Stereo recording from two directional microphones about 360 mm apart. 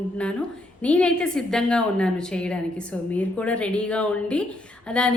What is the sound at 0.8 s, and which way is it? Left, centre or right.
A woman's voice, centre.